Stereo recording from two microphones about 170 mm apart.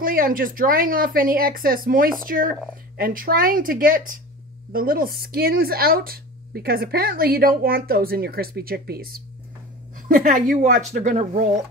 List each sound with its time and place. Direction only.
0.0 s speech: 55° right (ahead or behind)
9.9 s a woman's voice: 50° right (ahead or behind)
10.6 s speech: 45° right (ahead or behind)